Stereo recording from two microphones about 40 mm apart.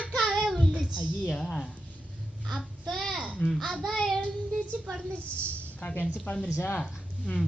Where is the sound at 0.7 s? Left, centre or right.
Centre.